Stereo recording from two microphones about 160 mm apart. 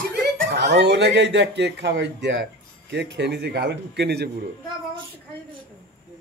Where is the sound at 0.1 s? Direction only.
90° right.